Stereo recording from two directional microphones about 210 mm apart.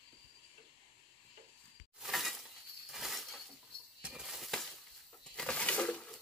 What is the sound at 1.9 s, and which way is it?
Breaking, centre (ahead or behind).